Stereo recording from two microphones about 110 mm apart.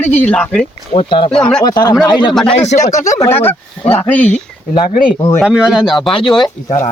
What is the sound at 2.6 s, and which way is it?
Speech, 90° left.